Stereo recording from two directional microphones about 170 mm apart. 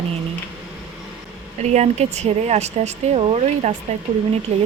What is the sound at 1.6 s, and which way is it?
A woman's voice, 40° right (ahead or behind).